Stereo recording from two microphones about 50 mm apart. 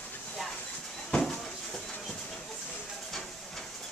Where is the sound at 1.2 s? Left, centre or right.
Centre.